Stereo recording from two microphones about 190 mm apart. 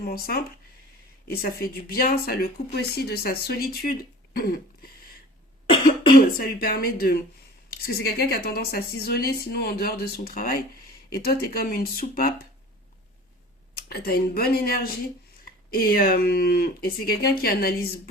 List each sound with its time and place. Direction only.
0.0 s speech: 55° left (ahead or behind)
4.4 s a sound: 55° left (ahead or behind)
5.6 s cough: 25° left (ahead or behind)
6.3 s speech: 50° left (ahead or behind)
13.8 s speech: 55° left (ahead or behind)